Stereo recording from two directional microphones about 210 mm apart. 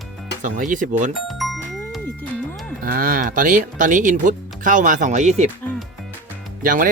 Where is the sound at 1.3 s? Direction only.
Centre (ahead or behind).